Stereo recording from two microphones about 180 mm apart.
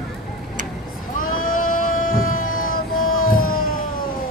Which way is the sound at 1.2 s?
50° left (ahead or behind).